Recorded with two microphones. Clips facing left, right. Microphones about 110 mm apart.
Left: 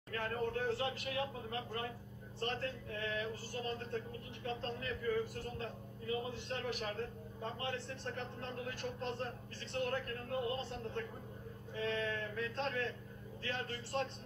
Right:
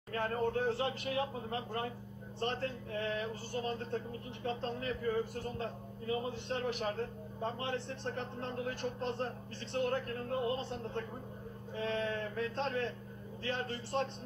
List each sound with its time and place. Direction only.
0.1 s speech: 30° right (ahead or behind)